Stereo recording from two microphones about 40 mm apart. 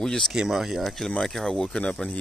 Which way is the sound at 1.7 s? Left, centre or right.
Left.